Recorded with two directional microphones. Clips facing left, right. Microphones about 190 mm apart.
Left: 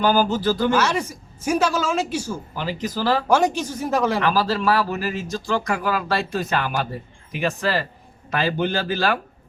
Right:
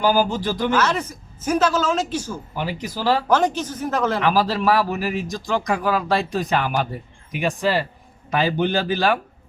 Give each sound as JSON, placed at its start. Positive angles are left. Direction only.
{"t": 0.0, "sound": "a man's voice", "side_deg": -10}
{"t": 0.7, "sound": "speech", "side_deg": 10}
{"t": 2.6, "sound": "a man's voice", "side_deg": -10}
{"t": 3.2, "sound": "speech", "side_deg": 10}
{"t": 4.2, "sound": "a man's voice", "side_deg": -15}